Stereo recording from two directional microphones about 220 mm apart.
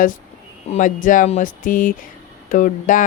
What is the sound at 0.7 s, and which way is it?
A woman's voice, 35° left (ahead or behind).